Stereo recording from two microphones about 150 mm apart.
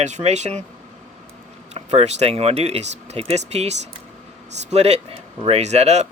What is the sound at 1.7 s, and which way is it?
Speech, 45° right (ahead or behind).